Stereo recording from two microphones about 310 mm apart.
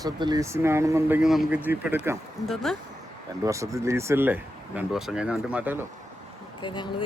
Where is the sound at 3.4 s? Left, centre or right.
Centre.